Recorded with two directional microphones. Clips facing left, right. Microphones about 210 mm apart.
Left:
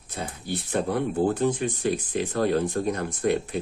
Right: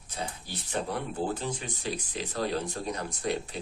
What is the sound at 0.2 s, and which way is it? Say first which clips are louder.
Speech: left 6 dB; 55° left (ahead or behind).